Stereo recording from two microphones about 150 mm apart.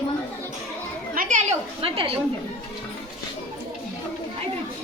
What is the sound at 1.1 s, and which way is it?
Children playing, 70° right (ahead or behind).